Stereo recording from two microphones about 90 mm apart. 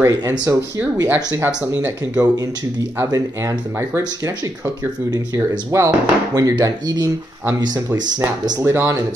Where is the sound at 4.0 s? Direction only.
50° right (ahead or behind).